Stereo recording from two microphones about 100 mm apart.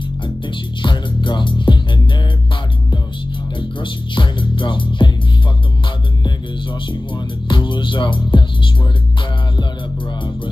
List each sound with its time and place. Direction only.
0.5 s music: 50° left (ahead or behind)
3.8 s music: 55° left (ahead or behind)
6.2 s music: 50° left (ahead or behind)